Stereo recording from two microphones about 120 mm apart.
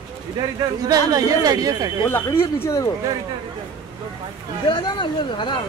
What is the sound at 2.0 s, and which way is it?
Speech, 20° left (ahead or behind).